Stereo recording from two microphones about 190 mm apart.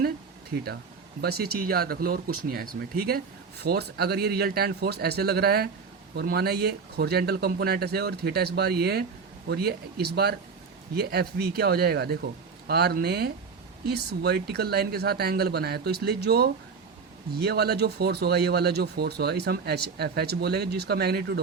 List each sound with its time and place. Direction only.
0.5 s speech: 60° right (ahead or behind)